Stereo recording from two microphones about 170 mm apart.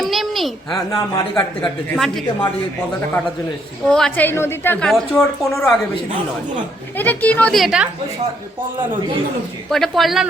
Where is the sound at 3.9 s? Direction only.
5° left (ahead or behind).